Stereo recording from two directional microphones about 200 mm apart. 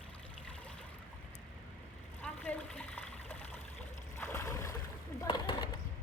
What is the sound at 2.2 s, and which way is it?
Water, 5° left (ahead or behind).